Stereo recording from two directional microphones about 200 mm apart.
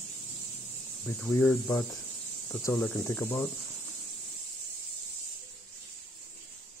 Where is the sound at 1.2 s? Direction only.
10° left (ahead or behind).